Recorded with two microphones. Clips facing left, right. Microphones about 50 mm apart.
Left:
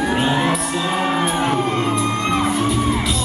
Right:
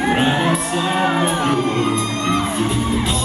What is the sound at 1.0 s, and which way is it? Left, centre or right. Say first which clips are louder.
Crowd: right 3 dB; centre.